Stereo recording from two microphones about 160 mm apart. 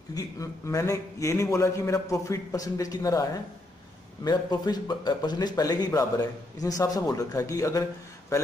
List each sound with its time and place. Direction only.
0.1 s a man's voice: 20° left (ahead or behind)